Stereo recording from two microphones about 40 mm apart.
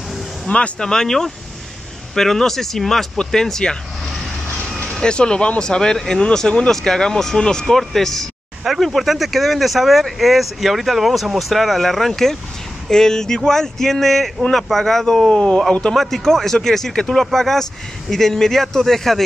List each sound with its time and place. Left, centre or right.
0.5 s speech: left
0.8 s speech: centre
5.0 s speech: left
15.9 s speech: centre